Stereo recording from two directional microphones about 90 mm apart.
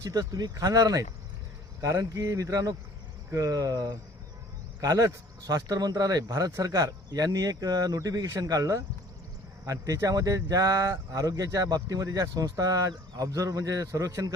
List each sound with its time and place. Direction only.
0.0 s speech: 40° right (ahead or behind)